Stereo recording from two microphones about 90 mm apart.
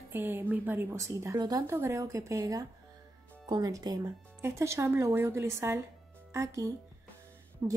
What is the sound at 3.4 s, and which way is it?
Speech, 50° right (ahead or behind).